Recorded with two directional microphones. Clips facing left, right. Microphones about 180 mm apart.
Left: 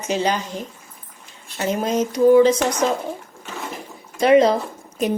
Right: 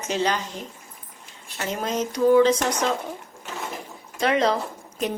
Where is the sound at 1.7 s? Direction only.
15° left (ahead or behind).